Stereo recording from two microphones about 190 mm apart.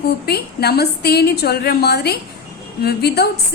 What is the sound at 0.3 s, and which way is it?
A woman's voice, 55° left (ahead or behind).